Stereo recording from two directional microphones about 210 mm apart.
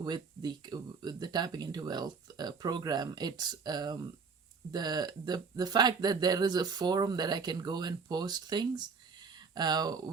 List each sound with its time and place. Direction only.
0.0 s speech: 20° right (ahead or behind)